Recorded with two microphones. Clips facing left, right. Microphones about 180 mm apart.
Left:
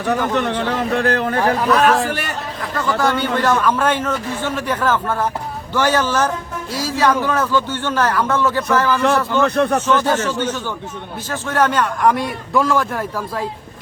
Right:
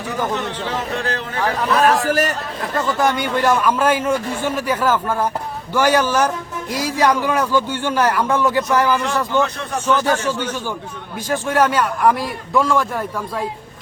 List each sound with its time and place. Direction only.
0.1 s speech: 65° left (ahead or behind)
1.8 s a man's voice: 40° right (ahead or behind)
2.6 s a man's voice: 20° right (ahead or behind); by 13.4 s centre (ahead or behind)